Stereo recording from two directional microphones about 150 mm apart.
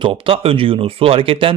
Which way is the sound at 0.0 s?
35° right (ahead or behind).